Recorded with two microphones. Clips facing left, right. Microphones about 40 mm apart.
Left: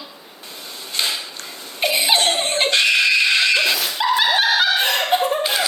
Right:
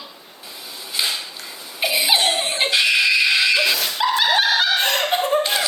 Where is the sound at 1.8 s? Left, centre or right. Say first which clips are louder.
Left 1 dB; centre.